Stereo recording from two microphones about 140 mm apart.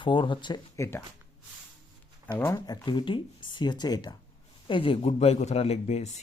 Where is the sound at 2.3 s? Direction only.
20° left (ahead or behind).